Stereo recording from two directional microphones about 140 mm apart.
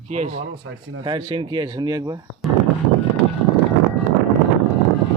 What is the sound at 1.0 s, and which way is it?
Speech, 35° right (ahead or behind).